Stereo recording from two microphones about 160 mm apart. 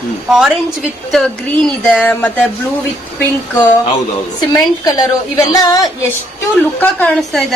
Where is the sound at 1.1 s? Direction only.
5° left (ahead or behind).